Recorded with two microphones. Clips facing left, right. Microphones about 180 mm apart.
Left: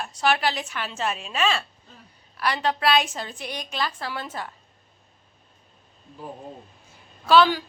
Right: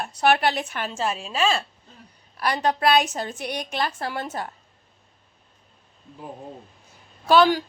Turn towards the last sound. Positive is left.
turn(degrees=-45)  # may be behind; listen again after turning